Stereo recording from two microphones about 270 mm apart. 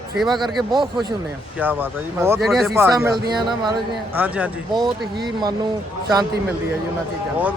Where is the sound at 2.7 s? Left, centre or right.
Centre.